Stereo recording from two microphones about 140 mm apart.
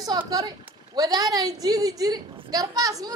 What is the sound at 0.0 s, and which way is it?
A woman's voice, 30° right (ahead or behind).